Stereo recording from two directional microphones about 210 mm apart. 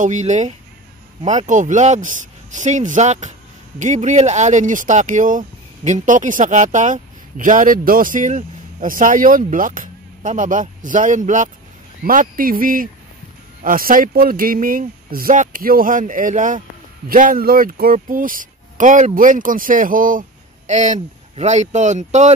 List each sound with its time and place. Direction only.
0.0 s speech: 35° right (ahead or behind)